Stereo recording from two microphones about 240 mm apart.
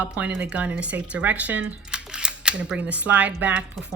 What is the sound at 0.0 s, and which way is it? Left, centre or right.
Speech, centre.